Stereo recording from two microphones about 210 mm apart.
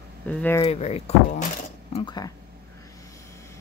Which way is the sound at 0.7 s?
30° left (ahead or behind).